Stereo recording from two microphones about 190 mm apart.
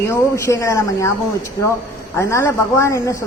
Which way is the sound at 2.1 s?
15° left (ahead or behind).